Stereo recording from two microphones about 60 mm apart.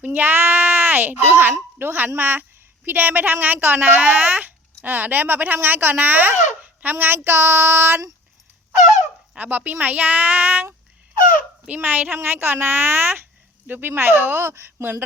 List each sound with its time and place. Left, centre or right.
0.0 s a woman's voice: right
6.9 s child singing: right
9.3 s a woman's voice: right